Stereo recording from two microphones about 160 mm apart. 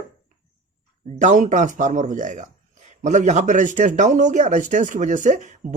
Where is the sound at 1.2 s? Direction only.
50° right (ahead or behind).